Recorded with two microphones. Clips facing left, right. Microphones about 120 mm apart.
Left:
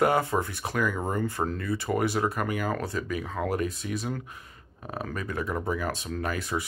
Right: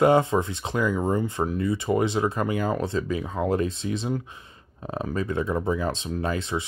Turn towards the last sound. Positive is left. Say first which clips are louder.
# right 3 dB
turn(degrees=-25)  # may be behind; listen again after turning